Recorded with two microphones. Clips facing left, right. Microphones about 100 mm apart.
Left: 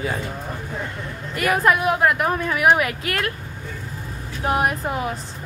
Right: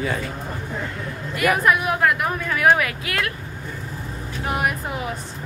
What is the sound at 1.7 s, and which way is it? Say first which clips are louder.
A woman's voice: left 4 dB; 30° left (ahead or behind).